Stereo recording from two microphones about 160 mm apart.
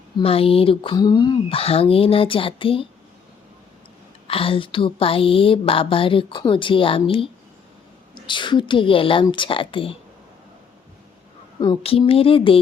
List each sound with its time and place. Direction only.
0.2 s a woman's voice: 35° left (ahead or behind)
4.3 s a woman's voice: 35° left (ahead or behind)
11.8 s a woman's voice: 35° left (ahead or behind)